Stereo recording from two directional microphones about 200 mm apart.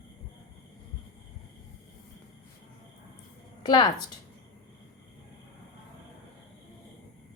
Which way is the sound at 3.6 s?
20° left (ahead or behind).